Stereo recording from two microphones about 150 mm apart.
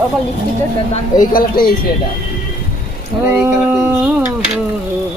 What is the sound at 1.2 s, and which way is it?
Speech, 70° left (ahead or behind).